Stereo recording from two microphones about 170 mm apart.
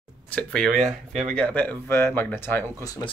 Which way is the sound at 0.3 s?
5° left (ahead or behind).